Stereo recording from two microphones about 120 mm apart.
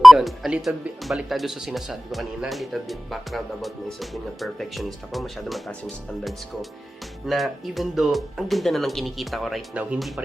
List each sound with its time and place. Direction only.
0.0 s speech: centre (ahead or behind)
7.3 s speech: centre (ahead or behind)